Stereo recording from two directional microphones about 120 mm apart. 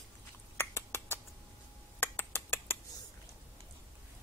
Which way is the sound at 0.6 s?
20° left (ahead or behind).